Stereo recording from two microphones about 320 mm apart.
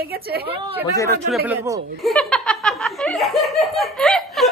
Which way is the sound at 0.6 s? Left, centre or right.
Centre.